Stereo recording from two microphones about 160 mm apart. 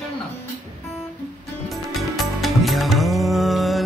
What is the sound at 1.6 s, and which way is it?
Music, centre (ahead or behind).